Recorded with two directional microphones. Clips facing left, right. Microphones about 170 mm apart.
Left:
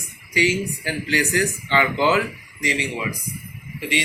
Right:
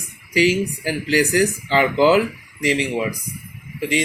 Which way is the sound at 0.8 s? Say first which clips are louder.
Right 5 dB; 40° right (ahead or behind).